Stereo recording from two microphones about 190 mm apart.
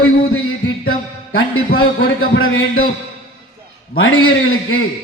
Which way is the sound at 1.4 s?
90° left.